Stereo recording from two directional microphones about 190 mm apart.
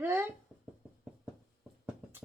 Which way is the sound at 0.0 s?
10° right (ahead or behind).